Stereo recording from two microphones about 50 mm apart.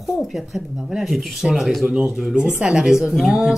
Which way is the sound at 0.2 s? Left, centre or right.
Centre.